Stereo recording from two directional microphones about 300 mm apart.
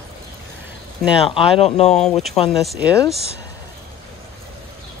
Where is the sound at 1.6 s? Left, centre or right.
Left.